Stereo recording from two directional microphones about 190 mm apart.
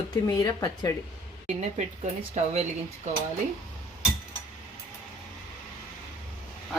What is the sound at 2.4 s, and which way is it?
Speech, 40° right (ahead or behind).